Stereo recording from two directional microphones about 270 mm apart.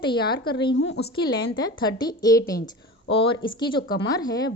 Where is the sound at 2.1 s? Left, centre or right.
Centre.